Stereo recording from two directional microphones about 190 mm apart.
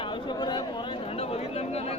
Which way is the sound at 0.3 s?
25° left (ahead or behind).